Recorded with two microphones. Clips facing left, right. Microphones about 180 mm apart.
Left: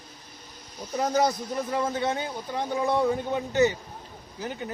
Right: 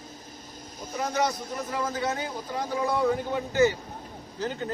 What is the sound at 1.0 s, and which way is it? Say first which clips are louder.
Speech: left 3 dB; 40° left (ahead or behind).